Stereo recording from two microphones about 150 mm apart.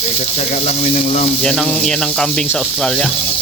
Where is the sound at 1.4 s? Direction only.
5° left (ahead or behind).